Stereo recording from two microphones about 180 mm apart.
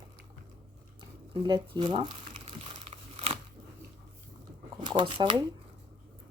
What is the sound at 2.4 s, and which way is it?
Crumpling, 35° right (ahead or behind).